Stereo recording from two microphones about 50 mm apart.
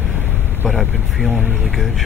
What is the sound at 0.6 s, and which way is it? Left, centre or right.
Speech, centre.